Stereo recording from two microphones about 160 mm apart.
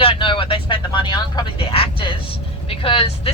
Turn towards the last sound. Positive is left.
turn(degrees=35)  # may be behind; listen again after turning